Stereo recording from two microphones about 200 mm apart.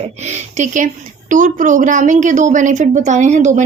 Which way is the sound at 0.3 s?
35° right (ahead or behind).